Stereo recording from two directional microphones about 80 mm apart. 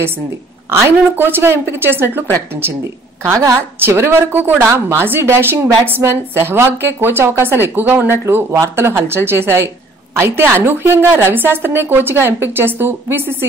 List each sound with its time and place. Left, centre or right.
0.7 s speech: right
3.8 s speech: right